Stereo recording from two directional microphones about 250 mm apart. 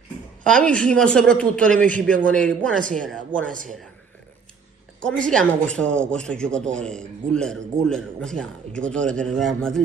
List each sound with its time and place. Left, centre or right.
0.4 s a man's voice: centre
2.0 s a man's voice: right
2.2 s a man's voice: centre
5.0 s a man's voice: centre